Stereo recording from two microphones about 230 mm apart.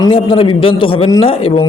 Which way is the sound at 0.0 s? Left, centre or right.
Left.